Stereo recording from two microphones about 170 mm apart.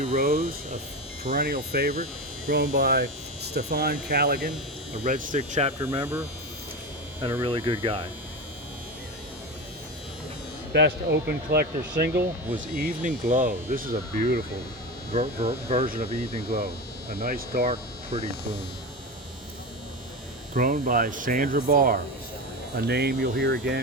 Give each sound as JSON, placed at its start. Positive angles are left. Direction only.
{"t": 0.2, "sound": "speech", "side_deg": -60}
{"t": 5.0, "sound": "hum", "side_deg": -50}
{"t": 5.8, "sound": "hum", "side_deg": -20}
{"t": 7.4, "sound": "speech", "side_deg": -30}
{"t": 10.7, "sound": "speech", "side_deg": -80}
{"t": 12.5, "sound": "speech", "side_deg": -55}
{"t": 15.1, "sound": "speech", "side_deg": -40}
{"t": 17.2, "sound": "speech", "side_deg": -65}
{"t": 17.7, "sound": "hum", "side_deg": -35}
{"t": 20.5, "sound": "speech", "side_deg": -55}
{"t": 22.8, "sound": "speech", "side_deg": -70}